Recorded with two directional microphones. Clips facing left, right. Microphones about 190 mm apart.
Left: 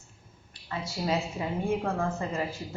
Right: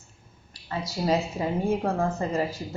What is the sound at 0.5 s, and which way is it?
A woman's voice, 40° right (ahead or behind).